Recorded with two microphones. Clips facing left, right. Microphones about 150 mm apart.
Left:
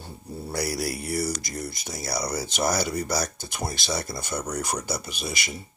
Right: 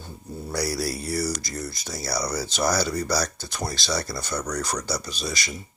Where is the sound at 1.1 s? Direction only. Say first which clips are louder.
Even; 55° left (ahead or behind).